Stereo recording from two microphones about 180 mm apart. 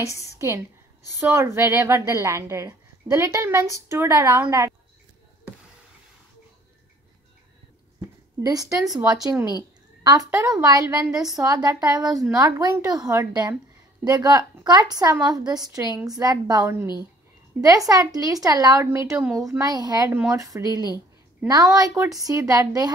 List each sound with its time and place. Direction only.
0.0 s a woman's voice: 15° left (ahead or behind)
1.3 s a woman's voice: 15° right (ahead or behind)
8.4 s a woman's voice: 20° right (ahead or behind)